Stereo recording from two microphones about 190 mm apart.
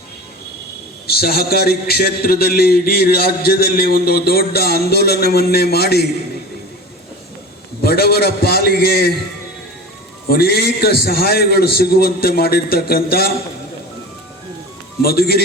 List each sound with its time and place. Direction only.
1.0 s a man's voice: 55° left (ahead or behind)
7.8 s a man's voice: 55° left (ahead or behind)
10.2 s a man's voice: 55° left (ahead or behind)
15.0 s a man's voice: 55° left (ahead or behind)